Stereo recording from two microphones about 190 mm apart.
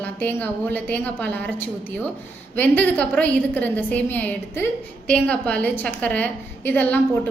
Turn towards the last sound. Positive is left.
turn(degrees=10)  # may be behind; listen again after turning